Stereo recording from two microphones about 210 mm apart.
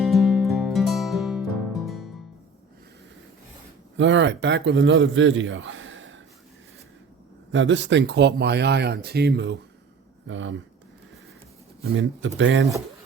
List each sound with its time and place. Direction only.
0.0 s music: centre (ahead or behind)
3.9 s a man's voice: 60° right (ahead or behind)
7.5 s speech: 60° right (ahead or behind)
10.2 s speech: 65° right (ahead or behind)
11.8 s speech: 65° right (ahead or behind)